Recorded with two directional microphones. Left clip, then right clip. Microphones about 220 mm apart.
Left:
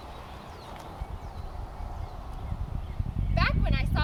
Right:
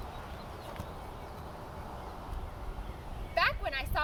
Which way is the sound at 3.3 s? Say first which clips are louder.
Even; 10° left (ahead or behind).